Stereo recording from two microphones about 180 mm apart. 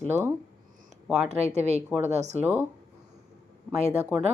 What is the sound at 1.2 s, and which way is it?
Speech, 35° right (ahead or behind).